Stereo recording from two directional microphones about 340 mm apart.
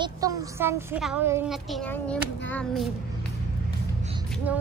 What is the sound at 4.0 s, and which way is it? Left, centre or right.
Music, centre.